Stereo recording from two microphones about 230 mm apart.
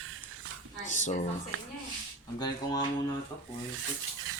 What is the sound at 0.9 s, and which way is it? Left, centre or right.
Speech, left.